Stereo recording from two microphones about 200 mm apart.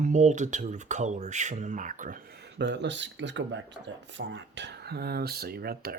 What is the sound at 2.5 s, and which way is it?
Speech, 60° right (ahead or behind).